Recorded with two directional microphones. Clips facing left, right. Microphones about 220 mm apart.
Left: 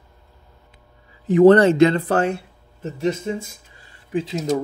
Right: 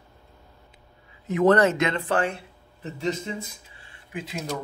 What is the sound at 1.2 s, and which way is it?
A man's voice, 30° left (ahead or behind).